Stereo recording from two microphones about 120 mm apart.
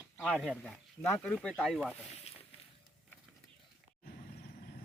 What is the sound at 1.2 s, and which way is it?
Speech, 5° left (ahead or behind).